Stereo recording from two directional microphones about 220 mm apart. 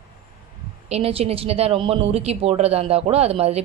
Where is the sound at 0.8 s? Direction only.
25° right (ahead or behind).